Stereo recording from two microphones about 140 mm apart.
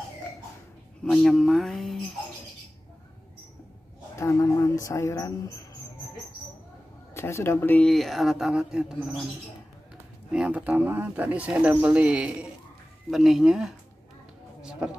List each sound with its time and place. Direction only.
1.0 s speech: centre (ahead or behind)
4.2 s a sound: 20° left (ahead or behind)
7.2 s speech: 20° left (ahead or behind)
7.9 s speech: centre (ahead or behind)
10.3 s speech: 10° right (ahead or behind)
14.6 s music: 5° right (ahead or behind)